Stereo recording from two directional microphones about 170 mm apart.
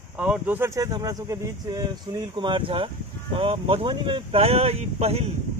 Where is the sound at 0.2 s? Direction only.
10° right (ahead or behind).